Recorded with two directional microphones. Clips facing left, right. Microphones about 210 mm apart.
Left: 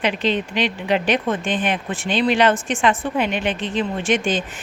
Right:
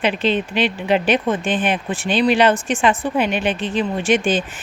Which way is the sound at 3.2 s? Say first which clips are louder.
Right 2 dB; 20° left (ahead or behind).